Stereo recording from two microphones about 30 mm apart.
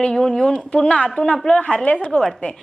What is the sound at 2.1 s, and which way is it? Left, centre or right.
Speech, centre.